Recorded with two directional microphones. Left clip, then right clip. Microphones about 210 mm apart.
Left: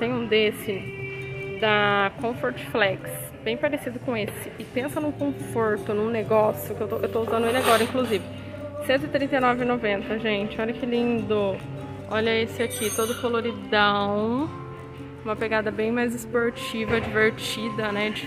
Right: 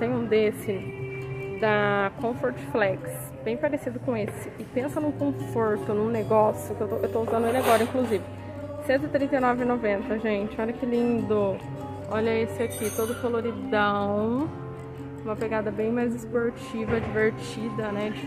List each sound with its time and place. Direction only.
0.0 s music: 5° right (ahead or behind)
1.6 s a woman's voice: 5° right (ahead or behind)